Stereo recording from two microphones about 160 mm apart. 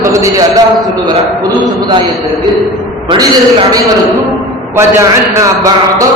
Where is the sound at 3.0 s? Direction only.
30° right (ahead or behind).